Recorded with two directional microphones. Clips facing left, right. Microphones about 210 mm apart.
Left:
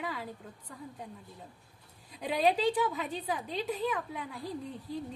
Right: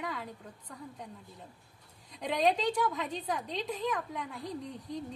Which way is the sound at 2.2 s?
5° left (ahead or behind).